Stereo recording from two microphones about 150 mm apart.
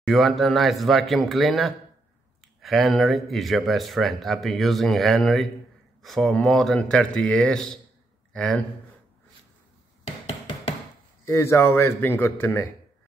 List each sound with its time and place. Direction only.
0.0 s speech: centre (ahead or behind)
11.2 s a man's voice: 15° left (ahead or behind)